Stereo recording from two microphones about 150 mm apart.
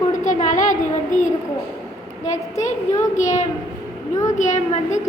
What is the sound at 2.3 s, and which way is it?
A woman's voice, 50° left (ahead or behind).